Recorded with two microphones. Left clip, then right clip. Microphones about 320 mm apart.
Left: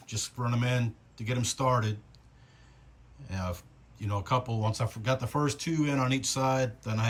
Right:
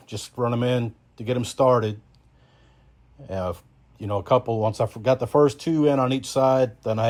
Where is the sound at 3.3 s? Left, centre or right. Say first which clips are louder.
Right 10 dB; centre.